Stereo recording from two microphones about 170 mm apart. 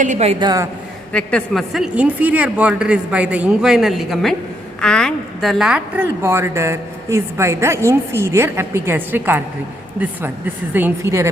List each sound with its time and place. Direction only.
0.0 s a woman's voice: 45° right (ahead or behind)
0.3 s a woman's voice: 20° right (ahead or behind)
1.1 s a woman's voice: 5° left (ahead or behind); by 11.3 s 15° right (ahead or behind)